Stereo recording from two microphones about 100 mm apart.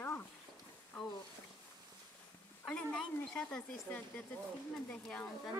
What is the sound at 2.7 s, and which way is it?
Speech, 10° left (ahead or behind).